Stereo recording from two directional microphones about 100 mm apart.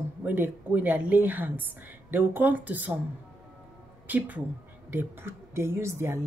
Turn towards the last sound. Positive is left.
turn(degrees=-25)  # may be behind; listen again after turning